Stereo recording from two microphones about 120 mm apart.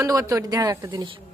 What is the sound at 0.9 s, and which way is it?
Speech, 45° right (ahead or behind).